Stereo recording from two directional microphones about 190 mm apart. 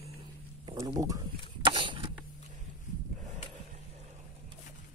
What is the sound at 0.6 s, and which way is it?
Speech, 20° right (ahead or behind).